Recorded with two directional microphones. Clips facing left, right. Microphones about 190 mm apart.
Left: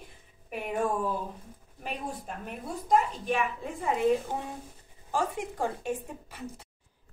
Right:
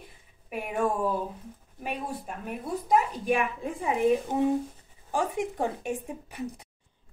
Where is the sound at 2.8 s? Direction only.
10° right (ahead or behind).